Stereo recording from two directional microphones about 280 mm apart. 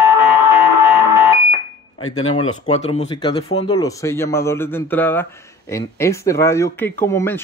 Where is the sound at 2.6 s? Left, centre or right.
Left.